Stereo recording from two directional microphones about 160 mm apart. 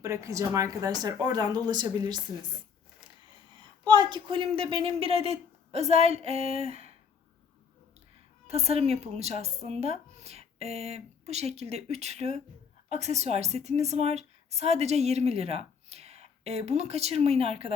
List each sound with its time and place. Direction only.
0.0 s speech: 20° right (ahead or behind)
3.5 s speech: 30° right (ahead or behind)
8.4 s a woman's voice: 40° right (ahead or behind)